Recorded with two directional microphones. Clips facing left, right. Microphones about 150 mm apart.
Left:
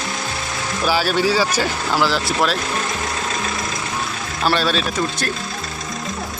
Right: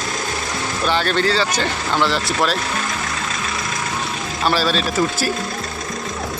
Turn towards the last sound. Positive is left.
turn(degrees=-5)  # may be behind; listen again after turning